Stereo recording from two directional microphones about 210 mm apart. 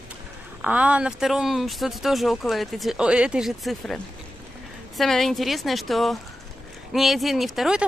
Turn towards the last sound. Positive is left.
turn(degrees=0)  # may be behind; listen again after turning